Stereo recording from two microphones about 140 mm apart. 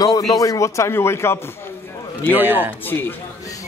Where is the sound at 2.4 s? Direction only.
10° right (ahead or behind).